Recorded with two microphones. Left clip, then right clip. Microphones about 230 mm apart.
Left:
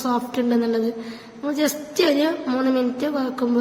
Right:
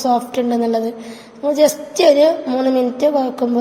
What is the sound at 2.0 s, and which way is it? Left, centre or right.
A woman's voice, centre.